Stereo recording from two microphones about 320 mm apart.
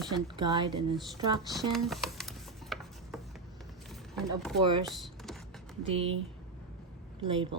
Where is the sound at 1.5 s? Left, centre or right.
Centre.